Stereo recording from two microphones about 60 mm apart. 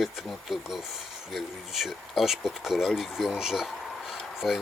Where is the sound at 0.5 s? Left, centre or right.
Centre.